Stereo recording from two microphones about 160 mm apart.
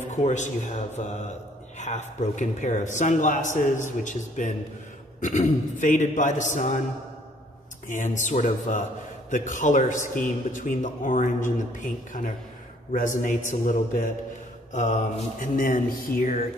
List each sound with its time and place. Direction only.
0.1 s a man's voice: 45° left (ahead or behind)
7.9 s a man's voice: 50° left (ahead or behind)